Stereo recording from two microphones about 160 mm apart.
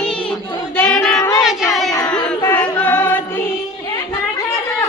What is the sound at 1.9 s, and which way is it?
Music, 20° left (ahead or behind).